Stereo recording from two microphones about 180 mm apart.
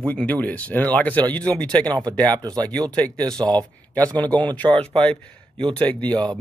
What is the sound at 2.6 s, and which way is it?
Speech, 5° left (ahead or behind).